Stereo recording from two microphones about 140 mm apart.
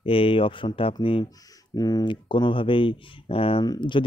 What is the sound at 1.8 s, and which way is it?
Speech, 30° left (ahead or behind).